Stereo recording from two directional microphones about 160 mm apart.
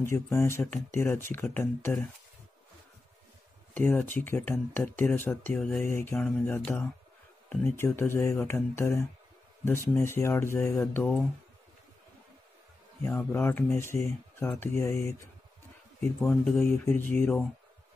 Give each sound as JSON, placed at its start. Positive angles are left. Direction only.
{"t": 0.0, "sound": "speech", "side_deg": 15}
{"t": 3.7, "sound": "speech", "side_deg": 10}
{"t": 13.0, "sound": "speech", "side_deg": 10}
{"t": 16.2, "sound": "speech", "side_deg": 5}